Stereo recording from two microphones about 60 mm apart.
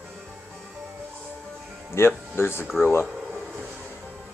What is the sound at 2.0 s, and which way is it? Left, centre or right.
Speech, left.